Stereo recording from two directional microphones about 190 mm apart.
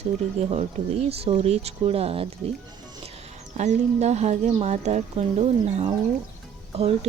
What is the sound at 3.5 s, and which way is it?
Speech, 35° right (ahead or behind).